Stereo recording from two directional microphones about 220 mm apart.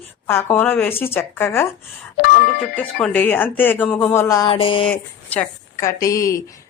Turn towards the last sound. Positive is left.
turn(degrees=15)  # may be behind; listen again after turning